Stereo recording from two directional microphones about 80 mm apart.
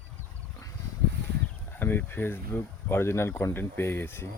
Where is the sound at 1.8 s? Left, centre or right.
Left.